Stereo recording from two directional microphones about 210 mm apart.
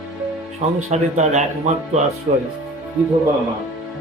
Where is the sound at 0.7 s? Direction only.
30° right (ahead or behind).